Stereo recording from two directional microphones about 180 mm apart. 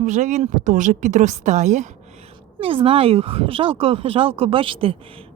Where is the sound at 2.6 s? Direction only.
30° right (ahead or behind).